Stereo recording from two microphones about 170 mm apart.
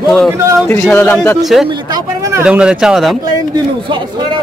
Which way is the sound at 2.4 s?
5° right (ahead or behind).